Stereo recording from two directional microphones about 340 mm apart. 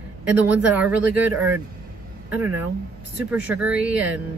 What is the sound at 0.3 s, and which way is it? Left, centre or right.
Speech, centre.